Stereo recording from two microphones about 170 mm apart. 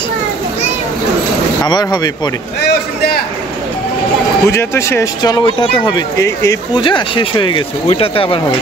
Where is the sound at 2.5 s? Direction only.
70° left (ahead or behind).